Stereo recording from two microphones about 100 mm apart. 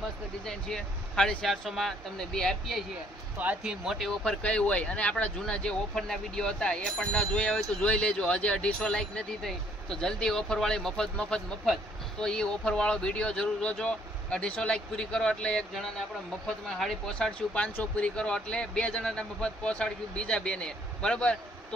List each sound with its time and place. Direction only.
0.5 s speech: 5° left (ahead or behind)
3.3 s speech: 15° right (ahead or behind)
3.8 s speech: centre (ahead or behind)